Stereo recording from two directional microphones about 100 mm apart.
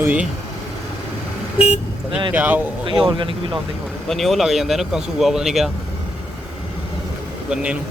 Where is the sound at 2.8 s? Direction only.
50° right (ahead or behind).